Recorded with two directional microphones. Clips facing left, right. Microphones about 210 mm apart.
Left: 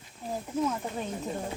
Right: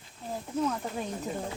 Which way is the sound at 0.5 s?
10° left (ahead or behind).